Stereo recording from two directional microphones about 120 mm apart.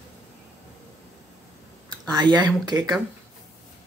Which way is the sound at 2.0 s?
35° right (ahead or behind).